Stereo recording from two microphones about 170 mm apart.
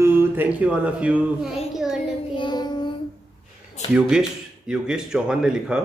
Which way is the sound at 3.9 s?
5° right (ahead or behind).